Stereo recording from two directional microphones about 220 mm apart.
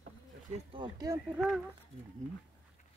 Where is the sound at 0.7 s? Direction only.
20° right (ahead or behind).